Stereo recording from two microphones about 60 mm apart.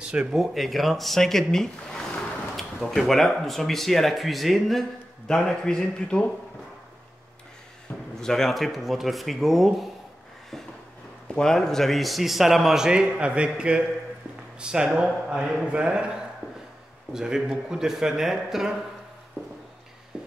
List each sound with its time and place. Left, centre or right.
0.0 s speech: centre
0.4 s a man's voice: centre
5.3 s speech: centre
8.2 s a man's voice: centre
11.3 s a man's voice: centre